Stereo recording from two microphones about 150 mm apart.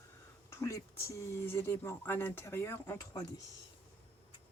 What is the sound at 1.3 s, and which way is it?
Speech, 15° left (ahead or behind).